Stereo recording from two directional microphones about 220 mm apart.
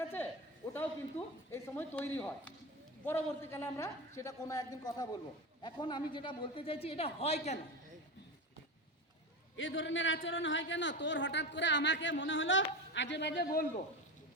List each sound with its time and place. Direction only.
0.0 s a sound: 10° left (ahead or behind)
1.5 s a woman's voice: 10° left (ahead or behind); by 7.6 s 30° left (ahead or behind)
9.6 s a man's voice: 60° left (ahead or behind)